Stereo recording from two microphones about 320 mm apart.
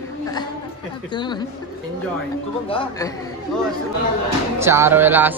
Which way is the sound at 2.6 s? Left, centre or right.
Centre.